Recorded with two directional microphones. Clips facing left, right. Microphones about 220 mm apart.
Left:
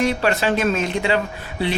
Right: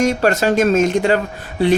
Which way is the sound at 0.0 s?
45° right (ahead or behind).